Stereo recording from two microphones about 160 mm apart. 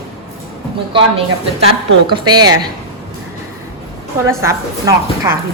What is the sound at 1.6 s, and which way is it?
Speech, 30° right (ahead or behind).